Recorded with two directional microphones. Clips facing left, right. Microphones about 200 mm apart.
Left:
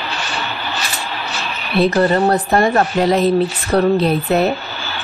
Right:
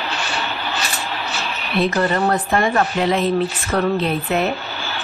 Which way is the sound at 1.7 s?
35° left (ahead or behind).